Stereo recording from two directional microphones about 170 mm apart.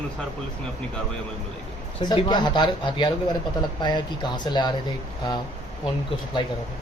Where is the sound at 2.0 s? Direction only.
30° left (ahead or behind).